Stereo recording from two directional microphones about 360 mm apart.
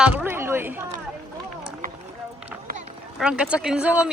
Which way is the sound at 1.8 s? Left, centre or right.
Right.